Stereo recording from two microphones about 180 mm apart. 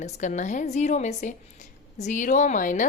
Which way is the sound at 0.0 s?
40° left (ahead or behind).